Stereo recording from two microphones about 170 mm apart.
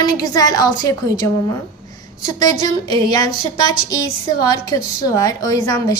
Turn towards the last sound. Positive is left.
turn(degrees=20)  # may be behind; listen again after turning